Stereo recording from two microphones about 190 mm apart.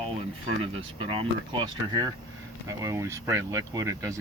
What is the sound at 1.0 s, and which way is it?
Speech, 25° right (ahead or behind).